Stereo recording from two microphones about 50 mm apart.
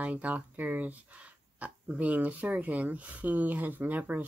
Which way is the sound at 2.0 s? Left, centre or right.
Right.